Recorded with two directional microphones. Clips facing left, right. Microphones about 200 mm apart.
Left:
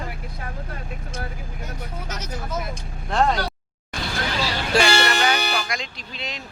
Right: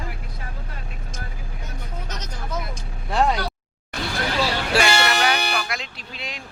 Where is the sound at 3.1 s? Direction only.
5° right (ahead or behind).